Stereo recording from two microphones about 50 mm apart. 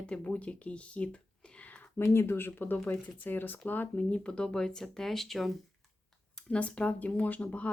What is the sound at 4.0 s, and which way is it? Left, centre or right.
Speech, left.